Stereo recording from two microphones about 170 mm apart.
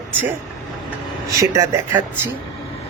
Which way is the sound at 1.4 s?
20° right (ahead or behind).